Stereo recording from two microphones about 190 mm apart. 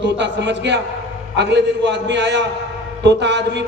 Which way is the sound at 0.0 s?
65° right (ahead or behind).